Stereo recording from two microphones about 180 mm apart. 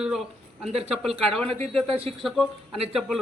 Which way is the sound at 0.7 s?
35° right (ahead or behind).